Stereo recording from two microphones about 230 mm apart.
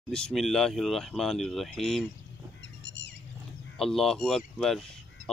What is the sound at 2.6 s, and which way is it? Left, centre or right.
Bird, left.